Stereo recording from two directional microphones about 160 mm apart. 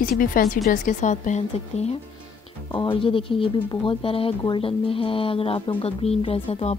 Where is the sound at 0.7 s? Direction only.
50° left (ahead or behind).